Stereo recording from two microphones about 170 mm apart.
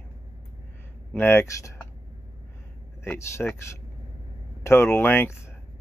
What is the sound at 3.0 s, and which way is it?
Speech, 15° left (ahead or behind).